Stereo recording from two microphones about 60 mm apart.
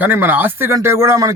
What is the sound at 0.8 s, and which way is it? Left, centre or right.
Speech, right.